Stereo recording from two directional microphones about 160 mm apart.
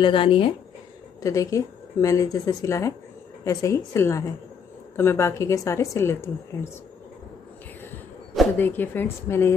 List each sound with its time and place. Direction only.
0.0 s speech: 35° left (ahead or behind)
1.2 s a woman's voice: 20° left (ahead or behind)
8.5 s a woman's voice: 10° left (ahead or behind)